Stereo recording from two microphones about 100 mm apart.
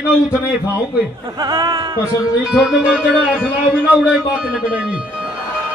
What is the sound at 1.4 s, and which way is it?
Speech, 40° right (ahead or behind).